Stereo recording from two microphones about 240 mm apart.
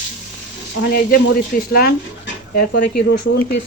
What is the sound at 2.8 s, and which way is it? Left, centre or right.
Speech, left.